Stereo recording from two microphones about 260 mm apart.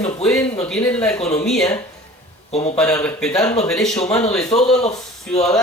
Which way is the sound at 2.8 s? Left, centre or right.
Centre.